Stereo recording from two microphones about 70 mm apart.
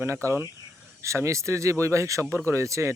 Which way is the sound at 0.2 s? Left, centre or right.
Right.